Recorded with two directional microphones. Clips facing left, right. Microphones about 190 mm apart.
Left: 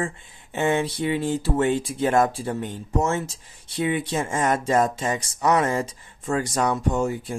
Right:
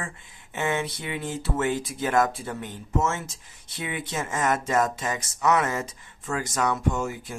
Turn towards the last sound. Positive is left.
turn(degrees=30)  # may be behind; listen again after turning